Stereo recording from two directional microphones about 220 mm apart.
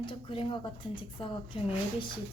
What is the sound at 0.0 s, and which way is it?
A woman's voice, 20° left (ahead or behind).